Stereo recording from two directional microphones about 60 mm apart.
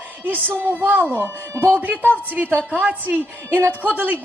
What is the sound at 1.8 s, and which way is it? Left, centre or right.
A woman's voice, right.